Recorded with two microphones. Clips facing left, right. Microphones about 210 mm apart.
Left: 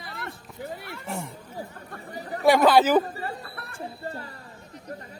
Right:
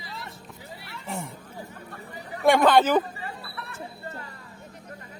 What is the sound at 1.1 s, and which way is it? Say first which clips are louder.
Speech: even; centre (ahead or behind).